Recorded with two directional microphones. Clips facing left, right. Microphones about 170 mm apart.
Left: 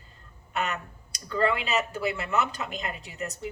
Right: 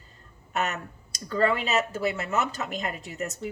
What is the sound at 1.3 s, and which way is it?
Speech, 40° right (ahead or behind).